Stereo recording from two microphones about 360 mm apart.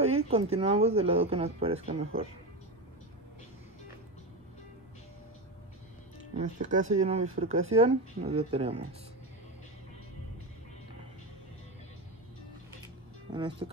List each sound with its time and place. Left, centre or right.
0.0 s speech: centre
6.3 s speech: centre
13.3 s speech: centre